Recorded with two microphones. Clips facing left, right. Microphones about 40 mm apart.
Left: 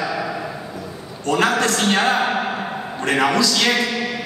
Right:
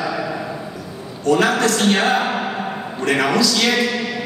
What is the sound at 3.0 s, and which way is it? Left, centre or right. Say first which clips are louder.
Speech: right 1 dB; left.